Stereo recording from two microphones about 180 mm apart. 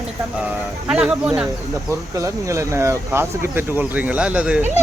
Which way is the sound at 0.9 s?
5° right (ahead or behind).